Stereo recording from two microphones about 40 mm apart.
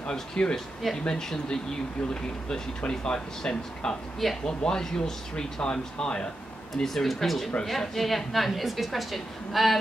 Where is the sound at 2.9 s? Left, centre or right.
Centre.